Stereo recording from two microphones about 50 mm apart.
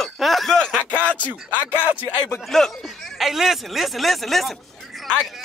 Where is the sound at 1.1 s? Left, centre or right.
Left.